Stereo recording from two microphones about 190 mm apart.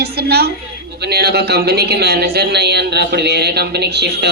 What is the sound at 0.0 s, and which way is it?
A woman's voice, 55° right (ahead or behind).